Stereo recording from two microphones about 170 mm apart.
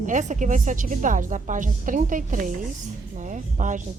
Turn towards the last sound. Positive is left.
turn(degrees=-45)  # may be behind; listen again after turning